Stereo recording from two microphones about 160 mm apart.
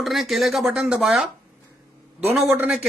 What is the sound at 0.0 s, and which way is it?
A man's voice, centre (ahead or behind).